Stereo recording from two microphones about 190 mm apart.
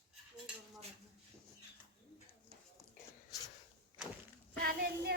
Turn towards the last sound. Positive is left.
turn(degrees=-55)  # may be behind; listen again after turning